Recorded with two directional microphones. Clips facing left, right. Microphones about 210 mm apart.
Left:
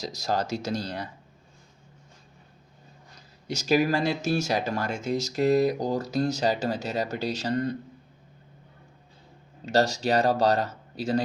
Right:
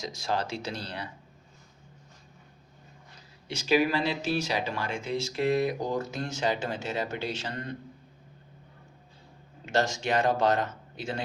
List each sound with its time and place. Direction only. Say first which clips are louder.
0.0 s speech: left 3 dB; 40° left (ahead or behind)
3.4 s speech: left 2 dB; 40° left (ahead or behind)
9.6 s speech: left 4 dB; 35° left (ahead or behind)